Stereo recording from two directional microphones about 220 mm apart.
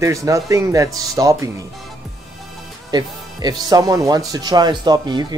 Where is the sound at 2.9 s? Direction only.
20° right (ahead or behind).